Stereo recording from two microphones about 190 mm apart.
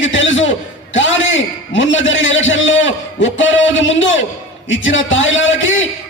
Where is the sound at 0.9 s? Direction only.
80° left.